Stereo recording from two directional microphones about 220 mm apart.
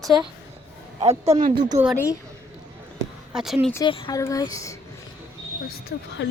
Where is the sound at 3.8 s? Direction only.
20° left (ahead or behind).